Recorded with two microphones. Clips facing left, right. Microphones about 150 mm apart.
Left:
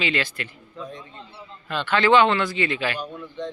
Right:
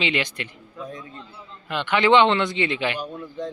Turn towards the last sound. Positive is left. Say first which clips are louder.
# right 1 dB
turn(degrees=-10)  # may be behind; listen again after turning